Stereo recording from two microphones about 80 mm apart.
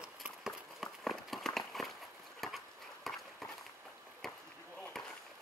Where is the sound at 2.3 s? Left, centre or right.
Centre.